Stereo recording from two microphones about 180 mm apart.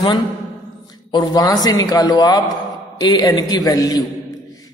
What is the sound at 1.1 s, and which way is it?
A man's voice, 20° left (ahead or behind).